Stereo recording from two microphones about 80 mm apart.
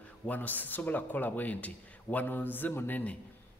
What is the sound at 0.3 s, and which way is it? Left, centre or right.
Speech, left.